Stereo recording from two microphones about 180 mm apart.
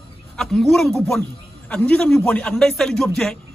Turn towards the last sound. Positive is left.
turn(degrees=5)  # may be behind; listen again after turning